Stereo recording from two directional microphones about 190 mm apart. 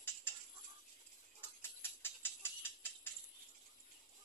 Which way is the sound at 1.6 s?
10° left (ahead or behind).